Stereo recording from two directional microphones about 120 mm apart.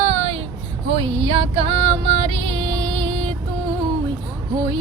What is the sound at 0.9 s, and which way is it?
Music, 55° right (ahead or behind).